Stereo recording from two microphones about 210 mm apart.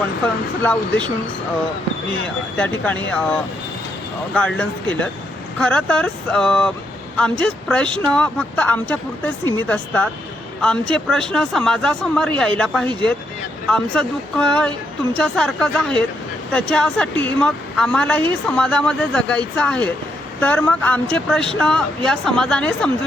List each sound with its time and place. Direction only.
0.6 s speech: 5° left (ahead or behind)
2.6 s speech: 5° left (ahead or behind)